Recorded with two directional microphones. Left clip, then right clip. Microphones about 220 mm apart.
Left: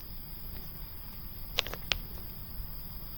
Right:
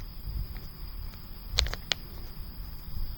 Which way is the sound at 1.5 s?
20° right (ahead or behind).